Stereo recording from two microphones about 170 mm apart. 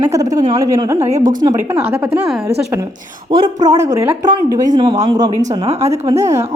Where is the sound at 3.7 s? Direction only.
20° right (ahead or behind).